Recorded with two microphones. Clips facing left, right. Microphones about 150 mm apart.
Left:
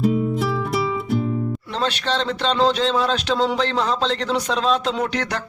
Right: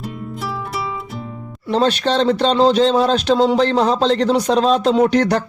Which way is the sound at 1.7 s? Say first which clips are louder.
Right 9 dB; 45° right (ahead or behind).